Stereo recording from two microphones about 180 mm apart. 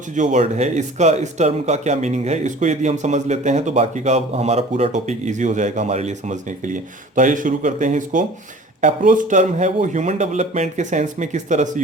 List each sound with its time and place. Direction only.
0.2 s speech: 40° right (ahead or behind)